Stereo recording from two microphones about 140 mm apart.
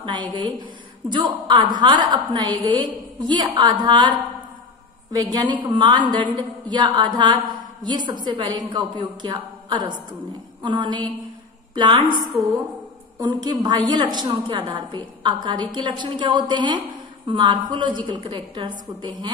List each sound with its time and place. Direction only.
1.0 s a woman's voice: 30° right (ahead or behind)
12.3 s a woman's voice: centre (ahead or behind)
13.2 s a woman's voice: 30° right (ahead or behind)